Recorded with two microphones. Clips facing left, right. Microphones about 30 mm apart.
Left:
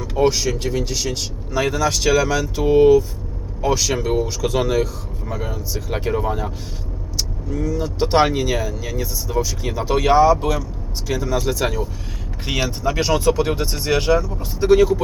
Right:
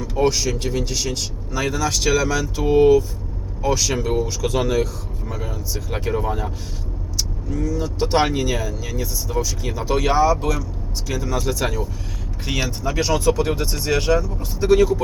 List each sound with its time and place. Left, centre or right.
0.0 s speech: centre
1.5 s speech: centre